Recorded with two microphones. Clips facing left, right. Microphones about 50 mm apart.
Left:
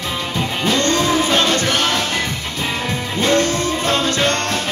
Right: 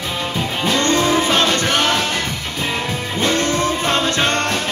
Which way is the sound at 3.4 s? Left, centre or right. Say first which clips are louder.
Right 1 dB; right.